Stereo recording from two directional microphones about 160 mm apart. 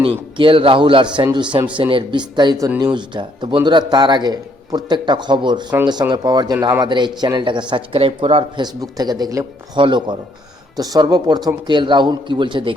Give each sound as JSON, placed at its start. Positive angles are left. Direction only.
{"t": 0.0, "sound": "a man's voice", "side_deg": -35}